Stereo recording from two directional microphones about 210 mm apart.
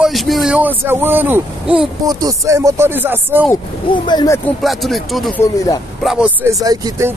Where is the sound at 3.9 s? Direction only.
20° left (ahead or behind).